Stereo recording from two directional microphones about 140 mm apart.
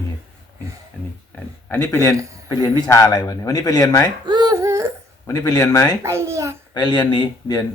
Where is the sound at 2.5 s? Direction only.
25° left (ahead or behind).